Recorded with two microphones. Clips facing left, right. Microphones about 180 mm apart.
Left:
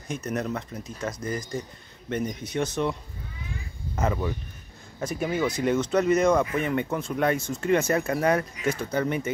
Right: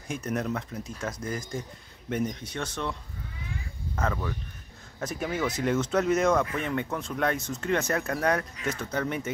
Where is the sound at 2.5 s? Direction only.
10° left (ahead or behind).